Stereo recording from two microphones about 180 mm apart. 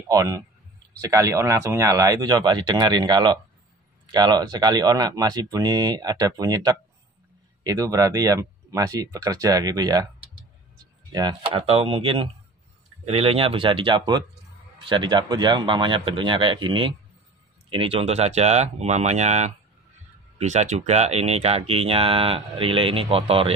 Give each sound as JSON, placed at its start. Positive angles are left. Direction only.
{"t": 0.1, "sound": "speech", "side_deg": -20}
{"t": 11.1, "sound": "speech", "side_deg": -25}